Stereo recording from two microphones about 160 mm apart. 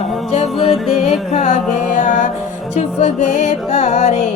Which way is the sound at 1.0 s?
45° left (ahead or behind).